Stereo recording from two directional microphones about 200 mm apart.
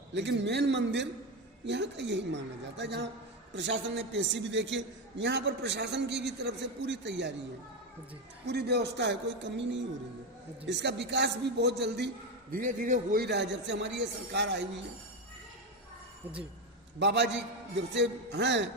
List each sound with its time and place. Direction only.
0.1 s a man's voice: 60° right (ahead or behind)
8.4 s a man's voice: 55° right (ahead or behind)
17.0 s a man's voice: 60° right (ahead or behind)